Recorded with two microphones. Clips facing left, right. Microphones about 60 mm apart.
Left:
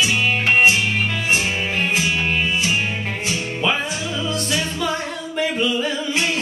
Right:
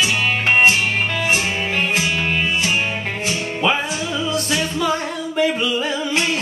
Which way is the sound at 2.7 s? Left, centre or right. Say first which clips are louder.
Right 1 dB; centre.